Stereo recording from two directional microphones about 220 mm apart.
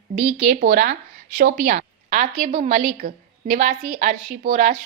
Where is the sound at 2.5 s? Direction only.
25° right (ahead or behind).